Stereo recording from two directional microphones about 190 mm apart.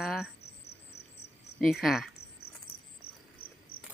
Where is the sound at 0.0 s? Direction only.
Centre (ahead or behind).